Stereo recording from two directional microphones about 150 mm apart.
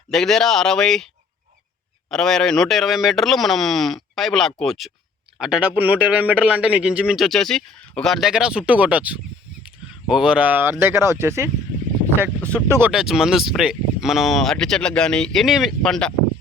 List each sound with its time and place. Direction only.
0.1 s a man's voice: 5° left (ahead or behind); by 11.5 s 15° right (ahead or behind)
12.5 s a man's voice: 15° right (ahead or behind)
12.9 s speech: 5° right (ahead or behind)